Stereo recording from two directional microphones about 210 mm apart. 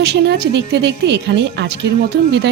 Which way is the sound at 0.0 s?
55° right (ahead or behind).